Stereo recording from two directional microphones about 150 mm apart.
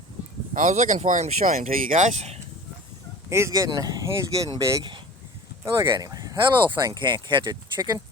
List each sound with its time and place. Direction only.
0.5 s speech: 60° right (ahead or behind)
3.2 s speech: 20° right (ahead or behind)
4.8 s speech: 30° right (ahead or behind)